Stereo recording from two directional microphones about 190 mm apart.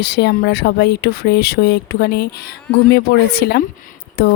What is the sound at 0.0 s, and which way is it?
Speech, 60° left (ahead or behind).